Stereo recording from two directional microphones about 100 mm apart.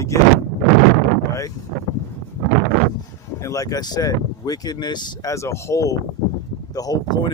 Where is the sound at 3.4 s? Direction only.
35° left (ahead or behind).